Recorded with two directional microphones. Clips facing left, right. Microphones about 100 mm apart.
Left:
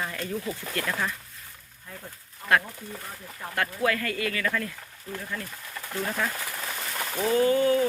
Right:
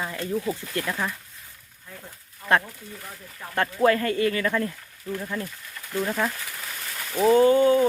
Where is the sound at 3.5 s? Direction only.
30° right (ahead or behind).